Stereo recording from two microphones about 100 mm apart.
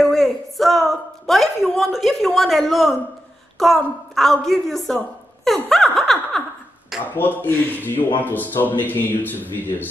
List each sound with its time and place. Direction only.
0.0 s a sound: 5° left (ahead or behind)
3.5 s a woman's voice: centre (ahead or behind)
7.2 s speech: 20° left (ahead or behind)